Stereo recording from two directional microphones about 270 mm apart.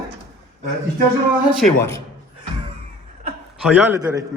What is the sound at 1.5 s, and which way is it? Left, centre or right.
Speech, centre.